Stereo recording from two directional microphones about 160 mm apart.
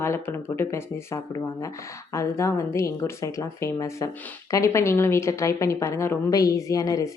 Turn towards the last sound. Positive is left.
turn(degrees=20)  # may be behind; listen again after turning